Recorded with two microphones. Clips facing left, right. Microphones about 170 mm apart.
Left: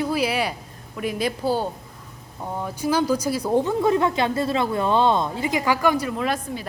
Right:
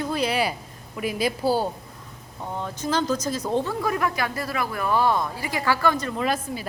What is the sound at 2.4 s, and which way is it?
A woman's voice, 10° left (ahead or behind).